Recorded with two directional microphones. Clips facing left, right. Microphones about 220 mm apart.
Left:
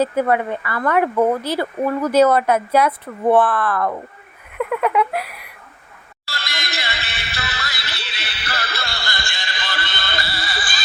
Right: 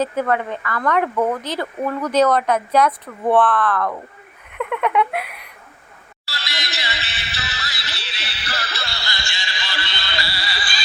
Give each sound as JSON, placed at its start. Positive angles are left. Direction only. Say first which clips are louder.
{"t": 0.0, "sound": "speech", "louder": "left 3 dB", "side_deg": 10}
{"t": 4.5, "sound": "a sound", "louder": "left 1 dB", "side_deg": 5}
{"t": 6.2, "sound": "music", "louder": "left 1 dB", "side_deg": 50}